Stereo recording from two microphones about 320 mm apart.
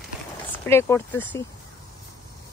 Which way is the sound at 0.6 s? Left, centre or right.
Centre.